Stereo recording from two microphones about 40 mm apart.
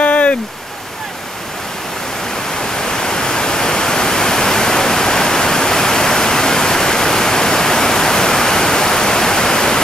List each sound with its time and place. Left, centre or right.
0.0 s stream: left
2.6 s pink noise: centre